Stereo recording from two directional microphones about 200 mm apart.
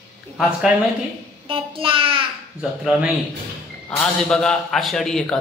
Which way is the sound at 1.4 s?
25° right (ahead or behind).